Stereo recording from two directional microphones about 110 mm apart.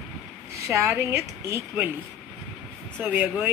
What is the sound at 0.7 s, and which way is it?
Speech, 25° right (ahead or behind).